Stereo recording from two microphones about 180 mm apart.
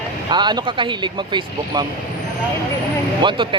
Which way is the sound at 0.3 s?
25° right (ahead or behind).